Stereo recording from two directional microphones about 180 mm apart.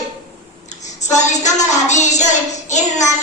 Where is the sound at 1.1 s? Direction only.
40° left (ahead or behind).